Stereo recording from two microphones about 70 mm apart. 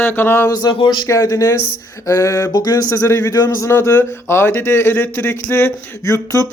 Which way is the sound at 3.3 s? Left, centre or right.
Left.